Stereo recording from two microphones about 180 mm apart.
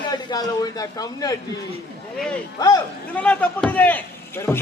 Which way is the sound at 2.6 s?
20° left (ahead or behind).